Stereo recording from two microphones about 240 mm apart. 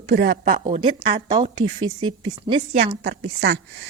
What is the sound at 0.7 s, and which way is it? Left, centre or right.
Speech, right.